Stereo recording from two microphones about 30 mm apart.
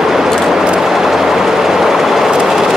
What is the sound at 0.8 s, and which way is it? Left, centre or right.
Train, centre.